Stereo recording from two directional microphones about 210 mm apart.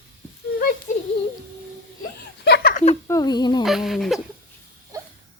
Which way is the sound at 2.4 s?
50° left (ahead or behind).